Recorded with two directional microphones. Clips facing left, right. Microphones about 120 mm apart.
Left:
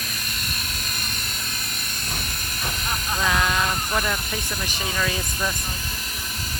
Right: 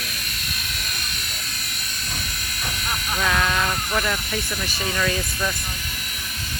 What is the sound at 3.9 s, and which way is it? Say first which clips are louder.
Speech: right 1 dB; centre (ahead or behind).